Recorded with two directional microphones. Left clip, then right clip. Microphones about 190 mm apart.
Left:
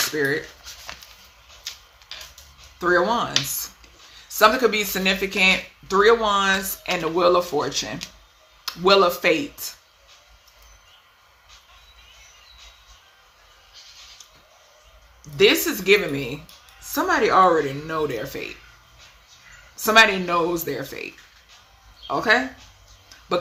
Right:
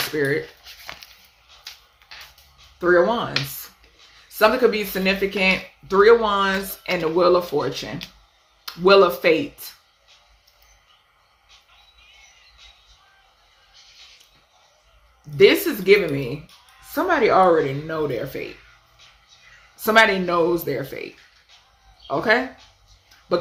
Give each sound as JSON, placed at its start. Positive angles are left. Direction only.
{"t": 0.2, "sound": "speech", "side_deg": 15}
{"t": 2.7, "sound": "speech", "side_deg": 20}
{"t": 4.4, "sound": "speech", "side_deg": 15}
{"t": 15.4, "sound": "speech", "side_deg": 15}
{"t": 19.7, "sound": "speech", "side_deg": 10}